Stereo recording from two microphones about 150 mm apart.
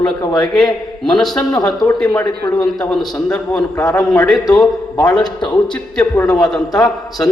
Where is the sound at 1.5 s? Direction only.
25° left (ahead or behind).